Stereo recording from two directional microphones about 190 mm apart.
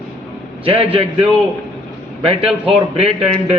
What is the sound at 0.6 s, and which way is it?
Speech, 30° right (ahead or behind).